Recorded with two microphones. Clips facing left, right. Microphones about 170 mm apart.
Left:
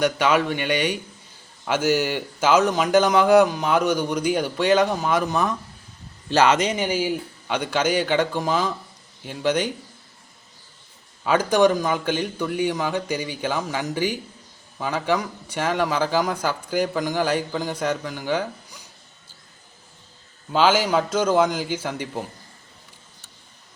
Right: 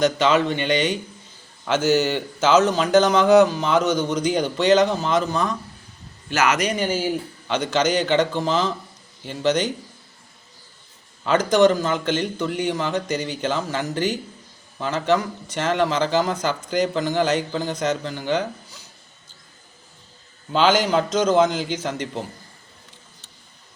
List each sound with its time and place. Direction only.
0.0 s a man's voice: 10° left (ahead or behind)
6.2 s a man's voice: 30° left (ahead or behind); by 9.7 s 10° left (ahead or behind)
11.3 s a man's voice: 10° left (ahead or behind)
20.5 s a man's voice: 5° left (ahead or behind)